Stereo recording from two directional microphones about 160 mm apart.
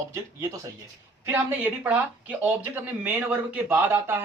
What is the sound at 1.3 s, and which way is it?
Speech, 10° right (ahead or behind).